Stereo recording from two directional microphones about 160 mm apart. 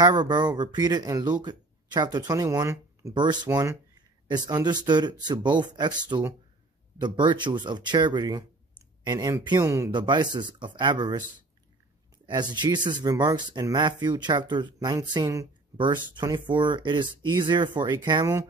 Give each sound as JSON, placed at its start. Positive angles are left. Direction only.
{"t": 0.0, "sound": "speech", "side_deg": -25}
{"t": 4.3, "sound": "speech", "side_deg": -25}
{"t": 9.8, "sound": "speech", "side_deg": -30}
{"t": 12.3, "sound": "speech", "side_deg": -25}